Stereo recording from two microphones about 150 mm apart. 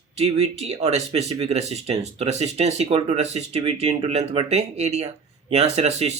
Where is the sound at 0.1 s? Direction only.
45° right (ahead or behind).